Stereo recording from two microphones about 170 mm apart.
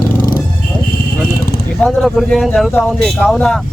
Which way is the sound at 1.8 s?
Centre (ahead or behind).